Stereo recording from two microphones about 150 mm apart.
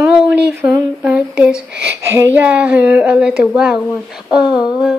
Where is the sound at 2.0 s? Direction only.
20° right (ahead or behind).